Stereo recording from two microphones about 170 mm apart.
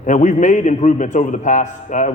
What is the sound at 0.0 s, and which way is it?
A man's voice, 45° left (ahead or behind).